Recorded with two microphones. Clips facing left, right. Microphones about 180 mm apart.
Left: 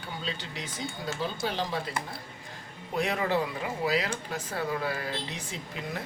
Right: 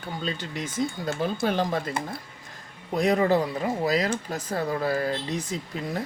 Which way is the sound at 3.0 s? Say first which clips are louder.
Right 6 dB; 40° right (ahead or behind).